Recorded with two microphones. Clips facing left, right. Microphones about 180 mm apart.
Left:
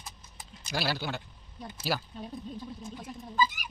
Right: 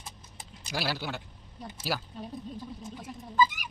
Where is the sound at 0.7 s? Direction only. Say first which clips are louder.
Left 1 dB; 5° right (ahead or behind).